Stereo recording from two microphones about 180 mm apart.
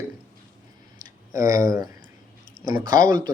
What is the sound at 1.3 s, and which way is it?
Speech, 15° right (ahead or behind).